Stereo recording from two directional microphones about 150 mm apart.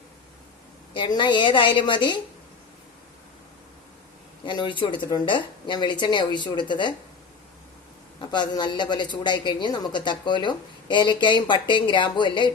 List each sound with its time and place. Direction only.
0.9 s speech: 30° left (ahead or behind)
4.4 s speech: 30° left (ahead or behind)
8.3 s speech: 30° left (ahead or behind)